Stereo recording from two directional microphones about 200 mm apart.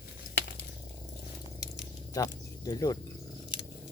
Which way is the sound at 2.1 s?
20° left (ahead or behind).